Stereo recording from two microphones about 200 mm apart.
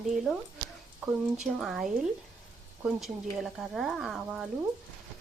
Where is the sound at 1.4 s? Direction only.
Centre (ahead or behind).